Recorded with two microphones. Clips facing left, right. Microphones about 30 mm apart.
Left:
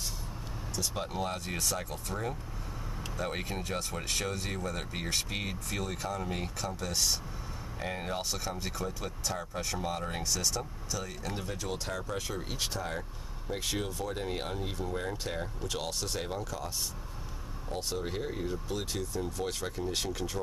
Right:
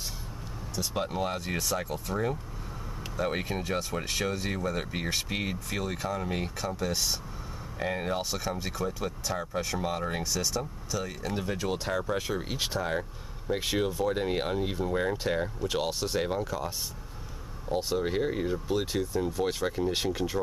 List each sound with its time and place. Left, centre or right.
0.7 s speech: centre